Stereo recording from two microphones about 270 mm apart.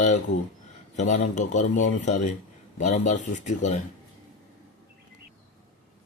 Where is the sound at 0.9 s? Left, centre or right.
Left.